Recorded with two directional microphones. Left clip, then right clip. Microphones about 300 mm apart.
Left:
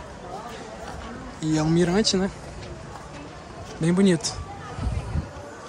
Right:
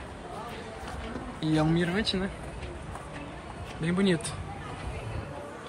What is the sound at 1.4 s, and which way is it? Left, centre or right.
Speech, centre.